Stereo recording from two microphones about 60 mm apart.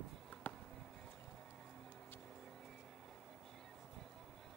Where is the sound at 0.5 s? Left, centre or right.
Left.